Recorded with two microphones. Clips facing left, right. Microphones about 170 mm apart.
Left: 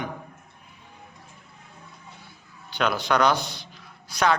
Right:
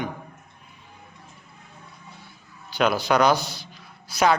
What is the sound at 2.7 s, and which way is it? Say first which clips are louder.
A man's voice: right 3 dB; 5° right (ahead or behind).